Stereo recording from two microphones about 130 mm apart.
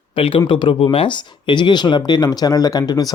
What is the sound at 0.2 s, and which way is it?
A man's voice, 45° left (ahead or behind).